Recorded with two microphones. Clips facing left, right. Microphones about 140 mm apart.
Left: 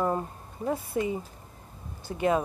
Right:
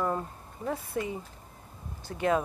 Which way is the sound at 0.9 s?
5° left (ahead or behind).